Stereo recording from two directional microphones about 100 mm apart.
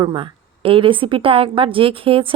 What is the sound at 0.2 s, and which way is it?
A woman's voice, 60° right (ahead or behind).